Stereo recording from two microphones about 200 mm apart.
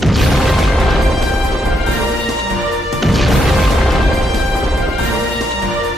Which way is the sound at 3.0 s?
Centre (ahead or behind).